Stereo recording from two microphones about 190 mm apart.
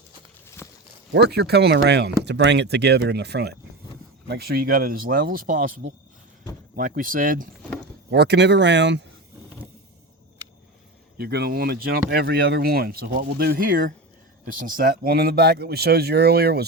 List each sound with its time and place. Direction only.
0.4 s a sound: 15° left (ahead or behind)
1.1 s speech: 60° right (ahead or behind)
8.1 s speech: 60° right (ahead or behind)
11.2 s speech: 55° right (ahead or behind)